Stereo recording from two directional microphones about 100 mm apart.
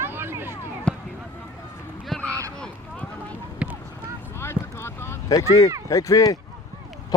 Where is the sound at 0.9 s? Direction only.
10° left (ahead or behind).